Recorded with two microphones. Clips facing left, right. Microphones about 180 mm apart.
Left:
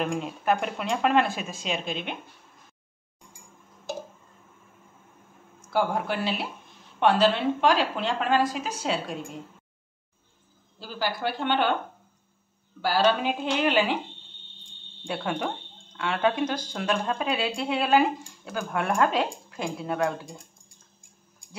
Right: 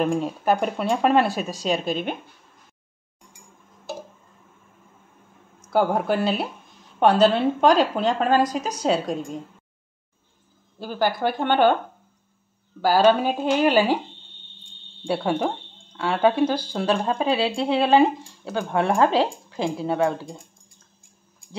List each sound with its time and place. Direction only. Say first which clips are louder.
0.0 s speech: right 5 dB; 35° right (ahead or behind)
5.6 s speech: right 5 dB; 40° right (ahead or behind)
10.8 s speech: right 7 dB; 50° right (ahead or behind)
12.8 s speech: right 6 dB; 45° right (ahead or behind)
15.0 s speech: right 6 dB; 35° right (ahead or behind)